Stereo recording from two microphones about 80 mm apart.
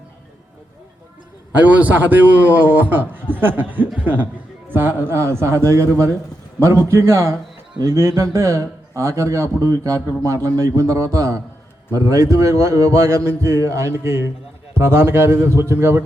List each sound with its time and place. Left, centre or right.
1.5 s a man's voice: centre